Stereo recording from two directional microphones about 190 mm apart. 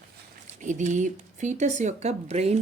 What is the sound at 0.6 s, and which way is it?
Speech, 40° right (ahead or behind).